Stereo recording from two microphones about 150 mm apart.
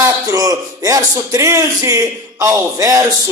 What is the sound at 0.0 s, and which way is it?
A man's voice, 20° right (ahead or behind).